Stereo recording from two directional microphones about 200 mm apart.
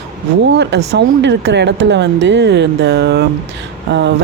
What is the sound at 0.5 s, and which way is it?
Speech, 60° right (ahead or behind).